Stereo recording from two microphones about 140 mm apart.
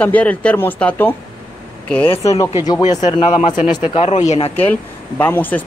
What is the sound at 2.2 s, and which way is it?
Speech, 20° left (ahead or behind).